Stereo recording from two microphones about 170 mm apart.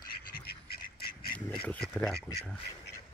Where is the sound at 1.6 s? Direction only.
10° left (ahead or behind).